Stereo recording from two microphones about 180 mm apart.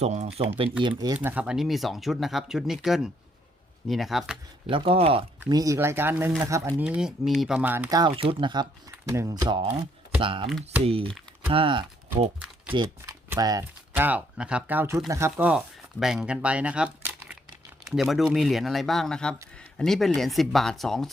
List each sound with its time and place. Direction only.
0.0 s speech: 40° right (ahead or behind)
0.8 s speech: 25° right (ahead or behind); by 4.7 s 5° right (ahead or behind)
4.7 s speech: 30° right (ahead or behind)
5.5 s speech: 20° right (ahead or behind)
7.9 s speech: 25° right (ahead or behind); by 21.1 s centre (ahead or behind)